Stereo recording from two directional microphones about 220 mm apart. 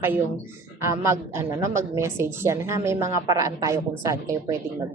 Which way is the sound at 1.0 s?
10° right (ahead or behind).